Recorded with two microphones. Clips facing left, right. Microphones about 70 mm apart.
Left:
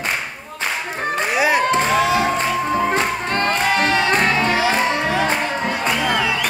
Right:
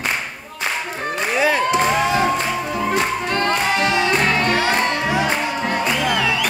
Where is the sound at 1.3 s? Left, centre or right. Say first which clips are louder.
Even; centre.